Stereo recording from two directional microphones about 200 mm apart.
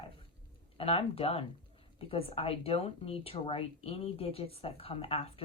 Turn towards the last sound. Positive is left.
turn(degrees=30)  # may be behind; listen again after turning